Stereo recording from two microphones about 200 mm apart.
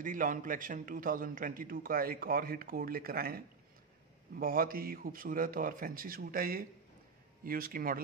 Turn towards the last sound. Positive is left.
turn(degrees=-45)  # may be behind; listen again after turning